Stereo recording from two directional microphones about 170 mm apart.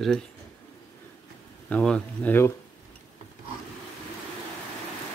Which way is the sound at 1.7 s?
5° left (ahead or behind).